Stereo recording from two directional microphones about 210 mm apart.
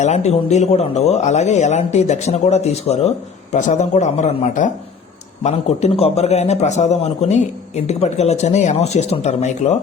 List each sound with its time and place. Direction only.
0.0 s speech: 30° left (ahead or behind)